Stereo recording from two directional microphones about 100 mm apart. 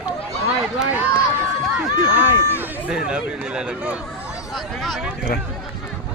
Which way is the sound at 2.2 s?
20° right (ahead or behind).